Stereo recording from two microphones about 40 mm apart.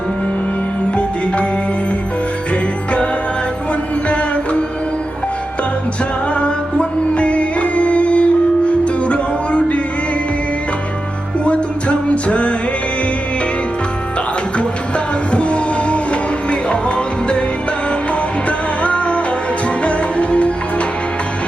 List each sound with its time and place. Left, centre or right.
6.3 s music: left
11.4 s music: left
14.6 s music: left
18.4 s music: left